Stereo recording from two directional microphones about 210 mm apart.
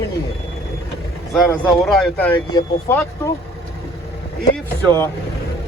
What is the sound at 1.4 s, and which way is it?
Speech, centre (ahead or behind).